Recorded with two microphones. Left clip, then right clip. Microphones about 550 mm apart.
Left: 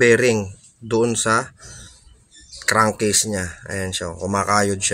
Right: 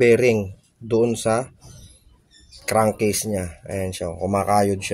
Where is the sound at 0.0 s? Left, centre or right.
Right.